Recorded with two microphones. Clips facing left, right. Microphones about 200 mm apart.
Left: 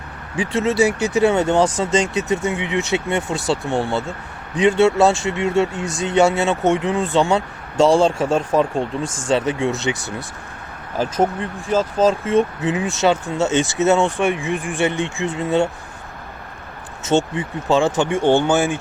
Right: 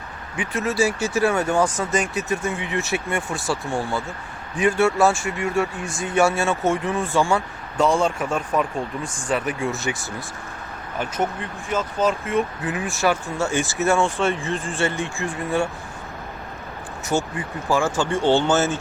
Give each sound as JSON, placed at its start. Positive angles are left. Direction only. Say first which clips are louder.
{"t": 0.3, "sound": "speech", "louder": "left 5 dB", "side_deg": 25}
{"t": 5.8, "sound": "speech", "louder": "left 5 dB", "side_deg": 75}
{"t": 6.1, "sound": "speech", "louder": "left 3 dB", "side_deg": 20}
{"t": 10.9, "sound": "speech", "louder": "left 6 dB", "side_deg": 30}
{"t": 17.3, "sound": "speech", "louder": "left 4 dB", "side_deg": 25}